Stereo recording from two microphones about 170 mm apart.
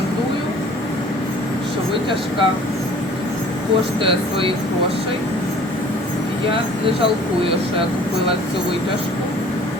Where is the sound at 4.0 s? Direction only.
30° right (ahead or behind).